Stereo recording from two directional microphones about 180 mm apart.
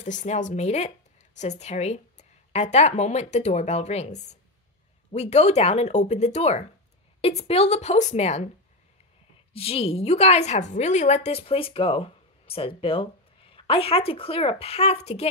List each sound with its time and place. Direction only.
0.0 s a woman's voice: 45° left (ahead or behind)
9.5 s a woman's voice: 30° left (ahead or behind)